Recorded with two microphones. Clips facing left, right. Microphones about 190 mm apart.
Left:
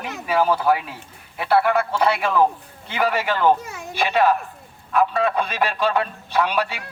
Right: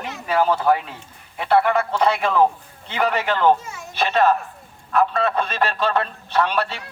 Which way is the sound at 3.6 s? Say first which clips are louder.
Left 2 dB; 60° left (ahead or behind).